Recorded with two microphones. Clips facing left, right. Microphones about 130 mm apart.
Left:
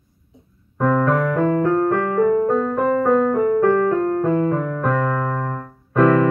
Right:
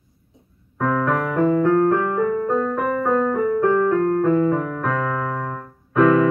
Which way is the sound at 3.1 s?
Centre (ahead or behind).